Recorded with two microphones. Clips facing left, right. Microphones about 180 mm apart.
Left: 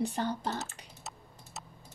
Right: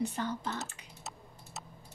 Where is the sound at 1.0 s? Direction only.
Centre (ahead or behind).